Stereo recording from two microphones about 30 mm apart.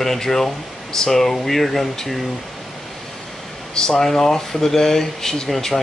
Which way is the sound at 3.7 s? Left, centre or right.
Left.